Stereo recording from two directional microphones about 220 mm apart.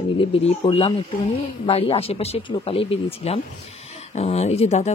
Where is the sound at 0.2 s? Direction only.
25° left (ahead or behind).